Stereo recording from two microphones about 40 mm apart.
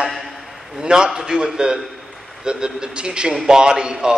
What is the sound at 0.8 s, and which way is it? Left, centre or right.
A man's voice, centre.